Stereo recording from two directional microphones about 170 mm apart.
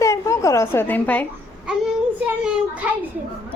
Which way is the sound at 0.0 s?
20° left (ahead or behind).